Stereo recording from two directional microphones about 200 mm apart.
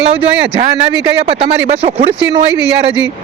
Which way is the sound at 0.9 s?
30° right (ahead or behind).